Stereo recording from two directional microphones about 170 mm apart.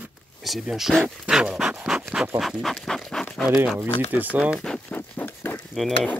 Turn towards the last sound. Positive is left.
turn(degrees=5)  # may be behind; listen again after turning